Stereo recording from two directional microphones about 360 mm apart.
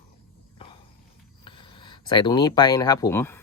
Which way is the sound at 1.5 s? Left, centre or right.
Centre.